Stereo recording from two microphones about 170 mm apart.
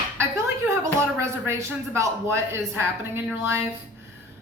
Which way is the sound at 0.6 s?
15° right (ahead or behind).